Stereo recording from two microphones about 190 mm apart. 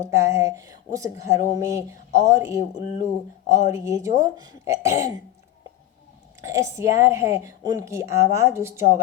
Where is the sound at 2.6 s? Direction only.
35° left (ahead or behind).